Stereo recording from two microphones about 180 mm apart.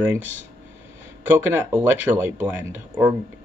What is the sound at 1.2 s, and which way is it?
Speech, 10° right (ahead or behind).